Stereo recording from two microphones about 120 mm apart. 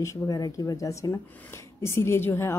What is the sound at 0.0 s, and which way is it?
Speech, 30° left (ahead or behind).